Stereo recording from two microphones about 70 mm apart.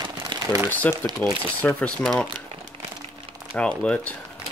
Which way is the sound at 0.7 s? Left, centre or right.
Left.